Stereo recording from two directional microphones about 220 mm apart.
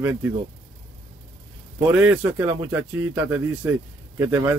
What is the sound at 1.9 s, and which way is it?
A man's voice, 5° right (ahead or behind).